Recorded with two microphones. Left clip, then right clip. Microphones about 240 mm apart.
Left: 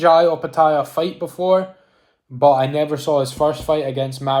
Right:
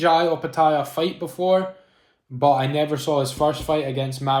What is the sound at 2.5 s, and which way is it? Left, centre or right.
Speech, centre.